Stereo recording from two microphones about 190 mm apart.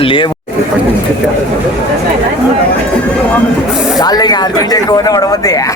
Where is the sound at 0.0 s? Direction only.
25° left (ahead or behind).